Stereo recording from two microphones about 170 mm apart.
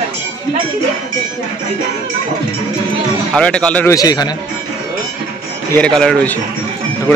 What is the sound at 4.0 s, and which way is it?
Speech, 20° left (ahead or behind).